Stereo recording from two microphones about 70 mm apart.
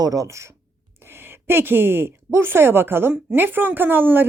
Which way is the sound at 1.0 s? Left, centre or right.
Right.